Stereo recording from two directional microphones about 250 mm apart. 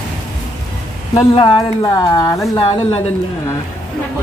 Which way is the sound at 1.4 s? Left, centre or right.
Centre.